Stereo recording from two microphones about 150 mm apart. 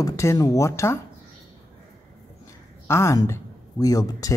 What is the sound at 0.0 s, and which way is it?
Speech, 20° left (ahead or behind).